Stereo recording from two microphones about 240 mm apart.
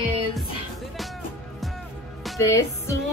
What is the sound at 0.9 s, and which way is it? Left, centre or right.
Music, centre.